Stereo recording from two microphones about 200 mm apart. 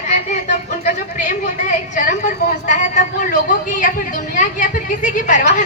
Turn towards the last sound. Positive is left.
turn(degrees=40)  # may be behind; listen again after turning